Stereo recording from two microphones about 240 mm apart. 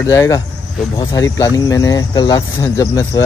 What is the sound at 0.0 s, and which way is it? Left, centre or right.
Speech, centre.